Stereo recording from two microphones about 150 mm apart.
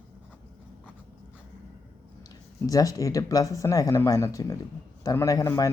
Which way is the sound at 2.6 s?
25° left (ahead or behind).